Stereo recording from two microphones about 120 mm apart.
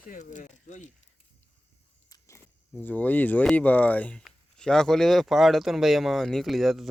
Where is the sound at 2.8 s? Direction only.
15° left (ahead or behind).